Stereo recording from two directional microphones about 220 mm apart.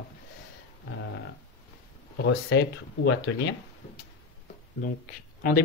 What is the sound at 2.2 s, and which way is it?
Speech, 55° left (ahead or behind).